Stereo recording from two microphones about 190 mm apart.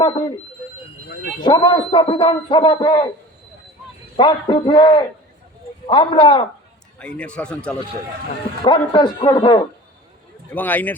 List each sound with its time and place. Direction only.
0.0 s speech: 25° left (ahead or behind)
1.5 s speech: 25° left (ahead or behind)
4.2 s speech: 25° left (ahead or behind)
7.0 s speech: 5° left (ahead or behind)
8.6 s speech: 25° left (ahead or behind)
10.5 s a man's voice: 10° left (ahead or behind)